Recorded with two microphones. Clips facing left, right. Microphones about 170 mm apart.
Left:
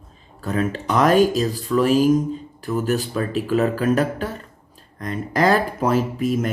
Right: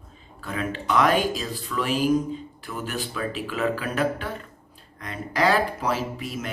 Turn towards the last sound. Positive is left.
turn(degrees=45)  # may be behind; listen again after turning